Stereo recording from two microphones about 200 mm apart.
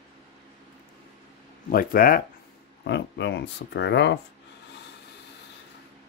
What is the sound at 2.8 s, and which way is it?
Speech, 60° left (ahead or behind).